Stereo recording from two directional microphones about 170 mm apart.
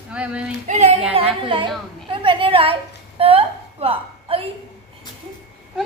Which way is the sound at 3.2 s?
35° right (ahead or behind).